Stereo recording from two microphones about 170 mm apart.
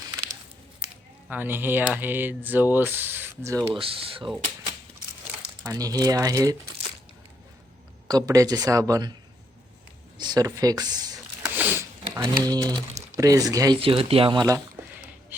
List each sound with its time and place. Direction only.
1.3 s speech: 10° right (ahead or behind)
3.8 s speech: 35° right (ahead or behind)
5.6 s speech: 20° right (ahead or behind)
8.0 s speech: 20° right (ahead or behind)
10.2 s speech: 25° right (ahead or behind)
11.4 s a sound: 10° right (ahead or behind)
12.2 s speech: 20° right (ahead or behind)
13.7 s speech: 35° right (ahead or behind)
15.3 s rub: 10° right (ahead or behind)